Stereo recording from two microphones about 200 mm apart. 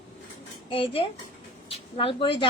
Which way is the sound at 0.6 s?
25° left (ahead or behind).